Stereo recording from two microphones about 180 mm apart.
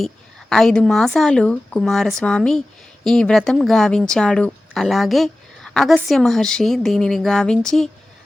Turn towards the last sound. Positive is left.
turn(degrees=5)  # may be behind; listen again after turning